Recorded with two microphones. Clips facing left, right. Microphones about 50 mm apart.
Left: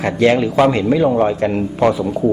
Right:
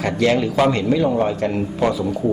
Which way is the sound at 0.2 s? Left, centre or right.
Left.